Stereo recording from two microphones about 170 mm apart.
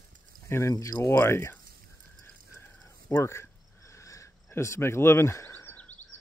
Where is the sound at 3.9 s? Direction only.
15° left (ahead or behind).